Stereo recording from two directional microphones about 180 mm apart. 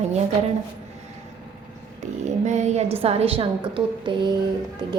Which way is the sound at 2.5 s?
40° right (ahead or behind).